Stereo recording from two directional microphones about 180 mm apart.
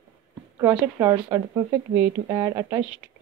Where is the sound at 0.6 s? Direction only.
15° right (ahead or behind).